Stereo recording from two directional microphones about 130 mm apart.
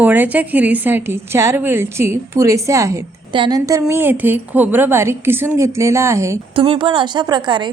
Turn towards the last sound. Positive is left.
turn(degrees=-35)  # may be behind; listen again after turning